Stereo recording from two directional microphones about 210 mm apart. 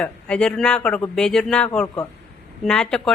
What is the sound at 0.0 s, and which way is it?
A woman's voice, 5° left (ahead or behind).